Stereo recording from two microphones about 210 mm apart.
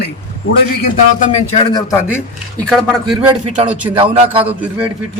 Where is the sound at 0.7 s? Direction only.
35° left (ahead or behind); by 2.2 s 15° left (ahead or behind).